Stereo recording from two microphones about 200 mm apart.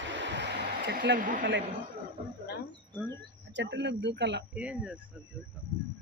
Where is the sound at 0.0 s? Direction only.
65° right (ahead or behind).